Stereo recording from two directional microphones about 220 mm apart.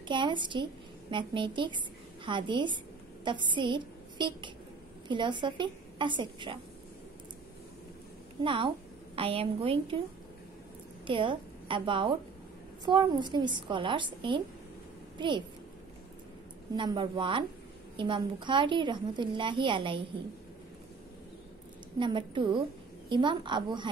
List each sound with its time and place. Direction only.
0.1 s a woman's voice: 20° right (ahead or behind)
8.5 s a woman's voice: 25° right (ahead or behind)
11.1 s a woman's voice: 20° right (ahead or behind)
16.7 s a woman's voice: 20° right (ahead or behind)
21.9 s a woman's voice: 20° right (ahead or behind)